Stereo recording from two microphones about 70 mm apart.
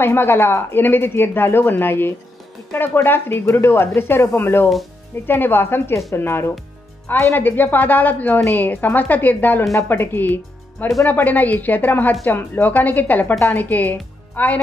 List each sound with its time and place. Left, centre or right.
0.0 s a woman's voice: left